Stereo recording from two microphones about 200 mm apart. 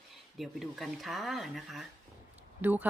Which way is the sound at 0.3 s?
Centre (ahead or behind).